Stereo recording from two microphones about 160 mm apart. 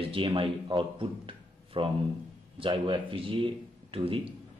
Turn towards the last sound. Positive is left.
turn(degrees=-35)  # may be behind; listen again after turning